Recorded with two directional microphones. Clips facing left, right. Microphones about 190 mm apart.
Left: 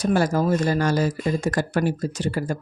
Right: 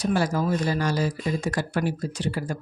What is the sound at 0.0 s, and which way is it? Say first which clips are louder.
Speech: left 3 dB; 45° left (ahead or behind).